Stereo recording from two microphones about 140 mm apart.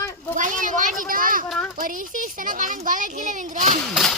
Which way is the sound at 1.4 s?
5° left (ahead or behind).